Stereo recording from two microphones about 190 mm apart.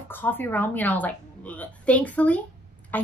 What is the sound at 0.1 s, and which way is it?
A woman's voice, 10° left (ahead or behind).